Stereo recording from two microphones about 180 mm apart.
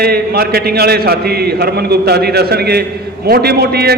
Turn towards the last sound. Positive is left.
turn(degrees=-60)  # may be behind; listen again after turning